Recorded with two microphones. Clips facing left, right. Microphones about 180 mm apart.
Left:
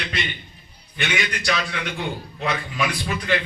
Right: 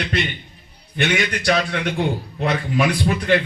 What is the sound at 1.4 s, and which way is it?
A man's voice, 50° right (ahead or behind).